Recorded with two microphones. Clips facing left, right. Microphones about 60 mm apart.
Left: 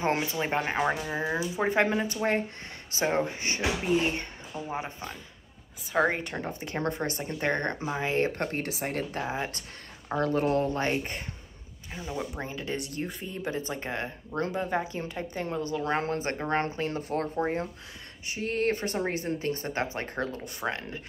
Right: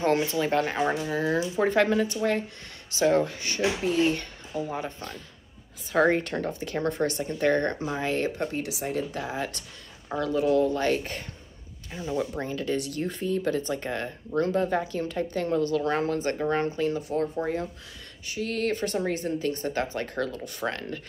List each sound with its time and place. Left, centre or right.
0.0 s speech: left
6.6 s speech: left
8.3 s speech: left
9.2 s speech: left
10.1 s speech: left
18.3 s speech: left